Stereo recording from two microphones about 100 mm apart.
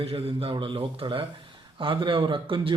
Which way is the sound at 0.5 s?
60° right (ahead or behind).